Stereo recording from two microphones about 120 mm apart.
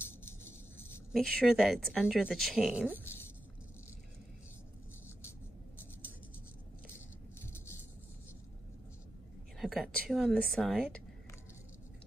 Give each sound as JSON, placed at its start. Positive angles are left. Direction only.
{"t": 0.5, "sound": "a sound", "side_deg": 20}
{"t": 1.1, "sound": "a woman's voice", "side_deg": 0}
{"t": 2.7, "sound": "speech", "side_deg": -15}
{"t": 9.6, "sound": "a woman's voice", "side_deg": 0}